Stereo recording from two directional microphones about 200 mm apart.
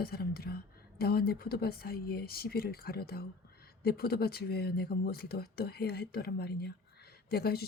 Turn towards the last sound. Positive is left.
turn(degrees=50)  # may be behind; listen again after turning